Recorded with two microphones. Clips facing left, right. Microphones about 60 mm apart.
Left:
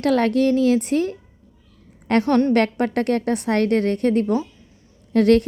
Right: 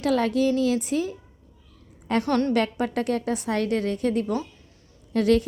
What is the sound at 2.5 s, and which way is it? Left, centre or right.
A woman's voice, left.